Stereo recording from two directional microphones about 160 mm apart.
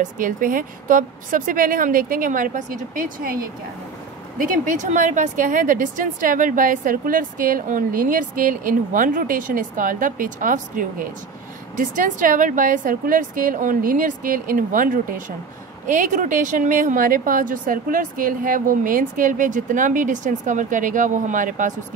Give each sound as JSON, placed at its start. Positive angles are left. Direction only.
{"t": 0.0, "sound": "a woman's voice", "side_deg": -60}